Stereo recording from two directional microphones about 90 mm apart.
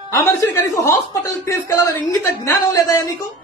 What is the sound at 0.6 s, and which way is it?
A man's voice, 35° left (ahead or behind).